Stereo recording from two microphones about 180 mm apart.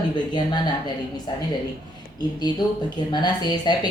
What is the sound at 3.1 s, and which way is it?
Speech, 25° left (ahead or behind).